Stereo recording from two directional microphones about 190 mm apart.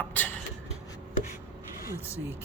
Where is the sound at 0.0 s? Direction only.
10° left (ahead or behind).